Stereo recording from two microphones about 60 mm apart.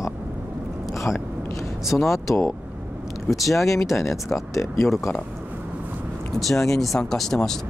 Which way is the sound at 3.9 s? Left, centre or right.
Centre.